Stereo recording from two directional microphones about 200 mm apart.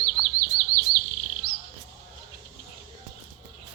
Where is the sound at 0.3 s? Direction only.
50° right (ahead or behind).